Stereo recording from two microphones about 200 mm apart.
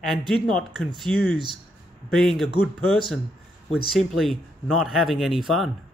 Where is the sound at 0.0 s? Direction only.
Centre (ahead or behind).